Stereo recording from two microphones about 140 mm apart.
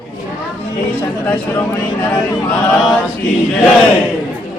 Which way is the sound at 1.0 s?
10° left (ahead or behind).